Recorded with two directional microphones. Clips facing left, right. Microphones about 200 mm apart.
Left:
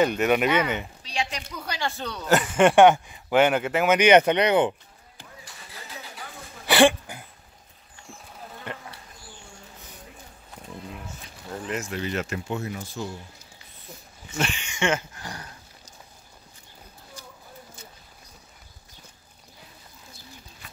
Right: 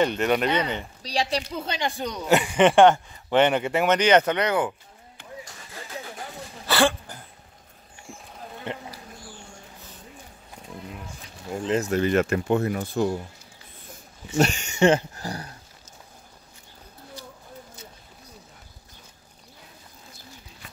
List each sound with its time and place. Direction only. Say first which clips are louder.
0.0 s speech: left 1 dB; 10° left (ahead or behind)
1.0 s a woman's voice: right 8 dB; 35° right (ahead or behind)
1.5 s speech: right 3 dB; 25° right (ahead or behind)
2.2 s speech: even; centre (ahead or behind); by 4.7 s 20° left (ahead or behind)
5.4 s vehicle: right 4 dB; 50° right (ahead or behind)
6.7 s a sound: left 4 dB; 15° left (ahead or behind)
8.7 s speech: right 4 dB; 20° right (ahead or behind)
11.6 s speech: right 7 dB; 30° right (ahead or behind)
11.9 s speech: right 8 dB; 50° right (ahead or behind)
14.3 s dog: right 7 dB; 40° right (ahead or behind)